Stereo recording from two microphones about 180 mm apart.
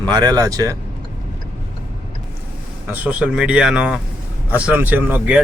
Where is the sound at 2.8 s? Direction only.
10° right (ahead or behind).